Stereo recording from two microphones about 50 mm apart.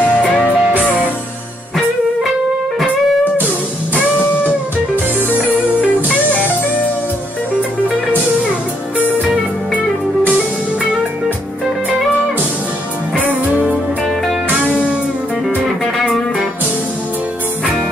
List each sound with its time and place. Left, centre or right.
0.2 s music: left
13.1 s music: right
14.6 s music: left